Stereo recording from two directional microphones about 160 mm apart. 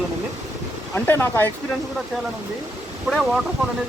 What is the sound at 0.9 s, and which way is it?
Speech, 15° left (ahead or behind).